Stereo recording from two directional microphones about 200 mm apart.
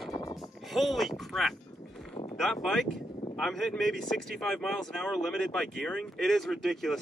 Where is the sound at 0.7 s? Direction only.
Centre (ahead or behind).